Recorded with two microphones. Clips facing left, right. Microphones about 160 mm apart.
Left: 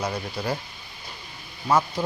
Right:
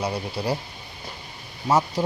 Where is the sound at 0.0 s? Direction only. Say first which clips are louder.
Right 2 dB; 30° right (ahead or behind).